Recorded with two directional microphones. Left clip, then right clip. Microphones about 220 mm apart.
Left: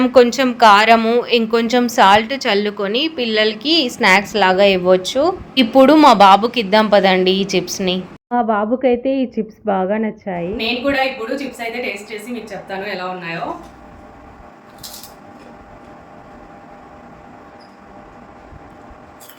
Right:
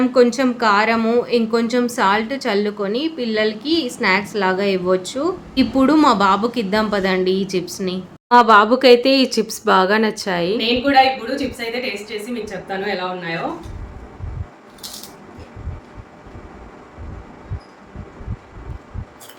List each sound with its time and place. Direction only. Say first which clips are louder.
0.0 s speech: left 3 dB; 15° left (ahead or behind)
8.3 s speech: right 6 dB; centre (ahead or behind)
12.6 s a woman's voice: right 1 dB; 10° right (ahead or behind)